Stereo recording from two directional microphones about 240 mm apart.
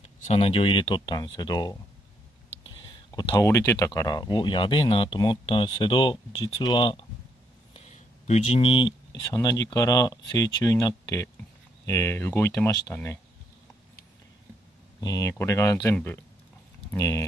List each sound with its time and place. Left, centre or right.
0.3 s speech: left
2.5 s whispering: left
2.8 s speech: centre
7.7 s a sound: left
9.3 s speech: centre
15.0 s speech: centre